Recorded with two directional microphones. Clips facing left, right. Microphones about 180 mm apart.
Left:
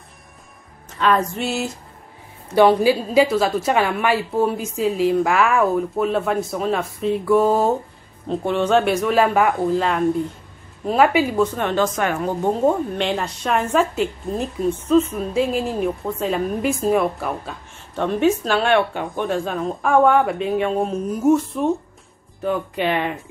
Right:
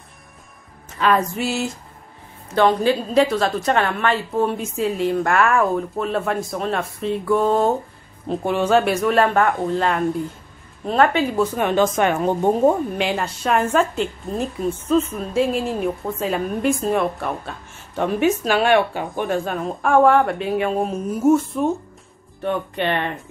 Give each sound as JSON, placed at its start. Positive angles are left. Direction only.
{"t": 0.8, "sound": "a woman's voice", "side_deg": -5}
{"t": 2.5, "sound": "a woman's voice", "side_deg": 10}
{"t": 11.5, "sound": "speech", "side_deg": -15}
{"t": 12.6, "sound": "a woman's voice", "side_deg": -5}